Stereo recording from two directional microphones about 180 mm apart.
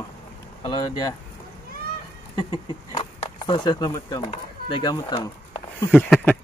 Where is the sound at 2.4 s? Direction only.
25° left (ahead or behind).